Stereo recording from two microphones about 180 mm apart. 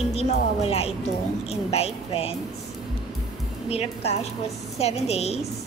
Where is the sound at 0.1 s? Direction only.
35° left (ahead or behind).